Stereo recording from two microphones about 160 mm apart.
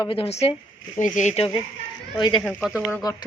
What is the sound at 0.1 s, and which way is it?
Speech, 35° left (ahead or behind).